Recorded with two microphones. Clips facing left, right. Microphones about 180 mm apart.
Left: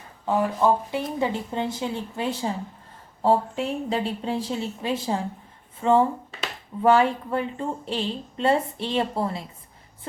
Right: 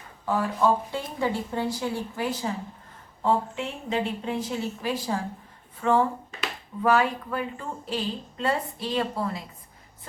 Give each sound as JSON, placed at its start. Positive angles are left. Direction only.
{"t": 0.3, "sound": "speech", "side_deg": 20}